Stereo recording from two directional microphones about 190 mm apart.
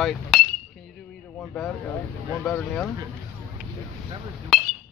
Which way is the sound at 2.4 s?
5° left (ahead or behind).